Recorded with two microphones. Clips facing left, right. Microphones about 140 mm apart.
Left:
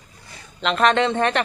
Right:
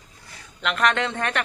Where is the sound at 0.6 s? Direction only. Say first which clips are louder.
Left 5 dB; 25° left (ahead or behind).